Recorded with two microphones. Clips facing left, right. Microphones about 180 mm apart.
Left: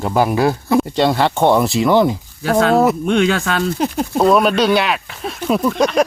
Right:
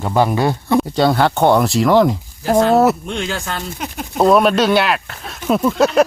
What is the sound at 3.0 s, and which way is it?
Speech, 65° left (ahead or behind).